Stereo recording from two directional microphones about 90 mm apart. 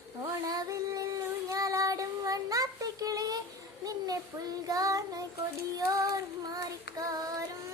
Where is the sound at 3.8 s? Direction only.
45° right (ahead or behind).